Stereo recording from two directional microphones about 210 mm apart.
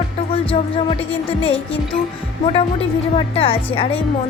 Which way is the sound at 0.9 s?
25° left (ahead or behind).